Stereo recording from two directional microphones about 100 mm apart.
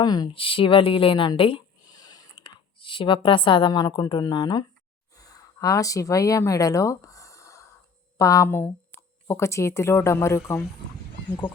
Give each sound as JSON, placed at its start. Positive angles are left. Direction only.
{"t": 0.0, "sound": "a woman's voice", "side_deg": 40}
{"t": 0.3, "sound": "speech", "side_deg": 60}
{"t": 1.9, "sound": "a sound", "side_deg": 45}
{"t": 3.2, "sound": "a woman's voice", "side_deg": 55}
{"t": 5.1, "sound": "a sound", "side_deg": 35}
{"t": 8.2, "sound": "speech", "side_deg": 30}